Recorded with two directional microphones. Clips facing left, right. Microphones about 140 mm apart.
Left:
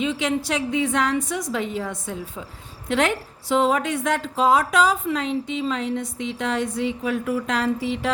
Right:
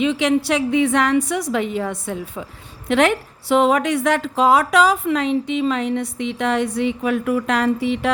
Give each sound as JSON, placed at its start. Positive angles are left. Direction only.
{"t": 0.0, "sound": "a woman's voice", "side_deg": -75}